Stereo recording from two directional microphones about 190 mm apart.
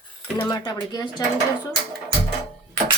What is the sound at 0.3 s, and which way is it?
Speech, 25° left (ahead or behind).